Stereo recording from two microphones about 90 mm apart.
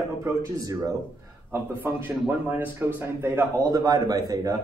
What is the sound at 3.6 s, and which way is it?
Speech, 40° right (ahead or behind).